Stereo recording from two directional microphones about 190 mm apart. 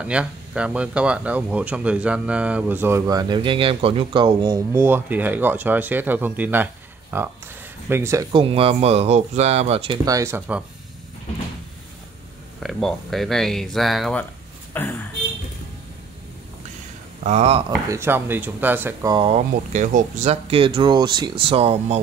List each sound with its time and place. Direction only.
0.0 s speech: 5° right (ahead or behind); by 9.9 s 30° right (ahead or behind)
10.0 s speech: 15° right (ahead or behind)
12.6 s speech: centre (ahead or behind)
17.2 s speech: 35° right (ahead or behind)
17.6 s speech: 15° right (ahead or behind)
19.1 s speech: 30° right (ahead or behind)